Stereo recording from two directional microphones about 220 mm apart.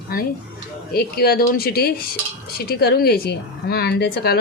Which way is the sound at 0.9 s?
45° left (ahead or behind).